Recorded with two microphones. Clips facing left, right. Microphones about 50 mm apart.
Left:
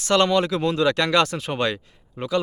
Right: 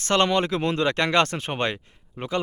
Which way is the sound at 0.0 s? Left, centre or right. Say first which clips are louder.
Left 2 dB; right.